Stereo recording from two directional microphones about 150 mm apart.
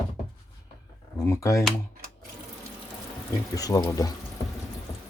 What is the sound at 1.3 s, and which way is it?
Speech, 20° left (ahead or behind).